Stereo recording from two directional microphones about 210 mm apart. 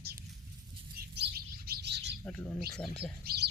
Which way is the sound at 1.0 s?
50° right (ahead or behind).